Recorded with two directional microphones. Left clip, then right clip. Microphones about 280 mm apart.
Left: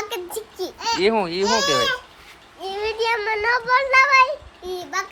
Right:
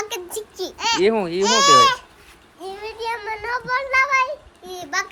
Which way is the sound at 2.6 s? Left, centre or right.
Left.